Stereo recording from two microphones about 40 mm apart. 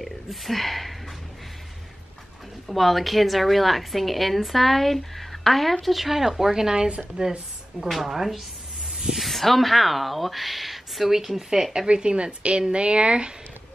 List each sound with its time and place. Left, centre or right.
0.0 s speech: centre
2.7 s a woman's voice: centre
7.9 s a woman's voice: centre
8.9 s snake: centre
9.2 s a woman's voice: centre
11.9 s speech: right